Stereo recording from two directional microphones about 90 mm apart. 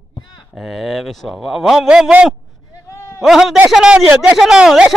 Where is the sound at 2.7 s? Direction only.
35° left (ahead or behind).